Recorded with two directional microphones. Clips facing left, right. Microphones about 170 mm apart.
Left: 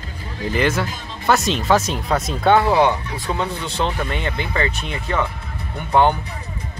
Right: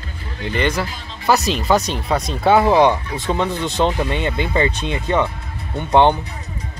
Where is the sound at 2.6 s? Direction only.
20° right (ahead or behind).